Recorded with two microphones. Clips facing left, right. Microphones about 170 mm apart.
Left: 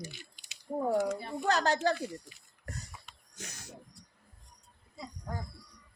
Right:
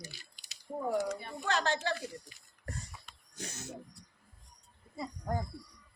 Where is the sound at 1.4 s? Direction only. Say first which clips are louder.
Left 4 dB; 40° left (ahead or behind).